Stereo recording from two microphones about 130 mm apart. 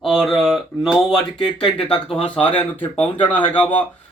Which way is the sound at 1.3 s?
35° left (ahead or behind).